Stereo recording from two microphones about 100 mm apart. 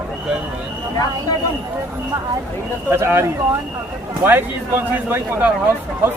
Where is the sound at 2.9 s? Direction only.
25° right (ahead or behind).